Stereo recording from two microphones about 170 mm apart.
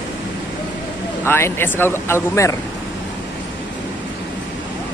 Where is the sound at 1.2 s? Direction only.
15° left (ahead or behind).